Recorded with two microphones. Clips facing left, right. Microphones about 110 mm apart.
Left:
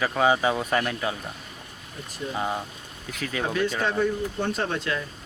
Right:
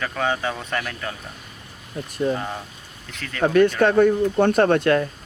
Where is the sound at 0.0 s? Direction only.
10° left (ahead or behind).